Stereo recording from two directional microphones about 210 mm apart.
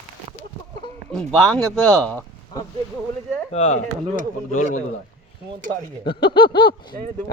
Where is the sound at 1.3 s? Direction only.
5° left (ahead or behind).